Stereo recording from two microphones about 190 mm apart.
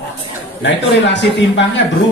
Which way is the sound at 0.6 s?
70° left (ahead or behind).